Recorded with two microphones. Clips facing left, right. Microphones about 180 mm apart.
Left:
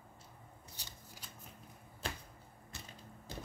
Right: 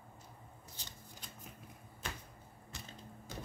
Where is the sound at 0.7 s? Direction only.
10° left (ahead or behind).